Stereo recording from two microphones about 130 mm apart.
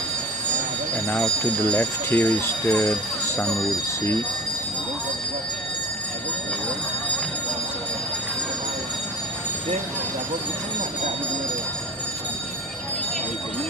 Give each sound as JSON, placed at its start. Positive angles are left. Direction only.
{"t": 1.0, "sound": "speech", "side_deg": 10}